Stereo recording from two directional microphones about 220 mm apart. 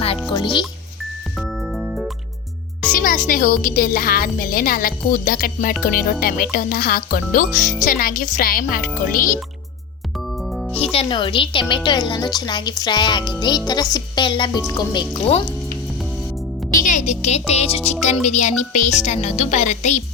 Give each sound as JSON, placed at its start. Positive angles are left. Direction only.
{"t": 0.3, "sound": "speech", "side_deg": 20}
{"t": 1.4, "sound": "music", "side_deg": 0}
{"t": 2.9, "sound": "speech", "side_deg": 40}
{"t": 10.5, "sound": "music", "side_deg": 0}
{"t": 10.9, "sound": "speech", "side_deg": 20}
{"t": 16.8, "sound": "speech", "side_deg": 35}